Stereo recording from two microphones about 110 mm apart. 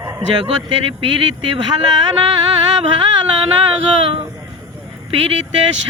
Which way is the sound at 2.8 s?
55° right (ahead or behind).